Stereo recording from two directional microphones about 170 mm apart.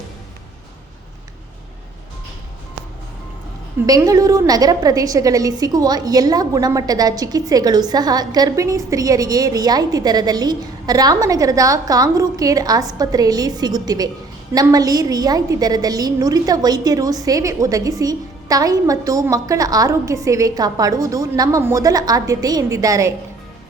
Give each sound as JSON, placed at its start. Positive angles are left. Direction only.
{"t": 3.8, "sound": "a woman's voice", "side_deg": -20}